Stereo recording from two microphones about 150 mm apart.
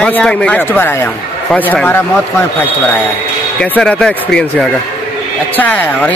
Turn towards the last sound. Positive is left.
turn(degrees=10)  # may be behind; listen again after turning